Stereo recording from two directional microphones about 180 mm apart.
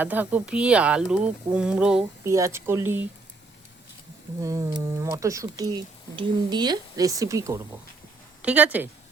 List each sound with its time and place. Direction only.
0.0 s speech: 10° right (ahead or behind)
2.2 s speech: 15° right (ahead or behind)
4.4 s speech: 20° right (ahead or behind)